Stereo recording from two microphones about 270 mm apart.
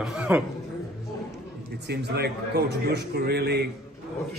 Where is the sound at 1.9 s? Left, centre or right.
Right.